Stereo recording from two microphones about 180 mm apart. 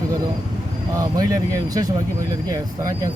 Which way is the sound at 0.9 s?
20° right (ahead or behind).